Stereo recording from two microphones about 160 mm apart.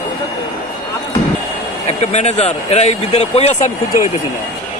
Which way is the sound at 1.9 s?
45° left (ahead or behind).